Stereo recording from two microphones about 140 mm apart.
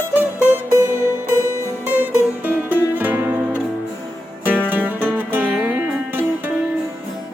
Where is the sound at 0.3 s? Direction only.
15° right (ahead or behind).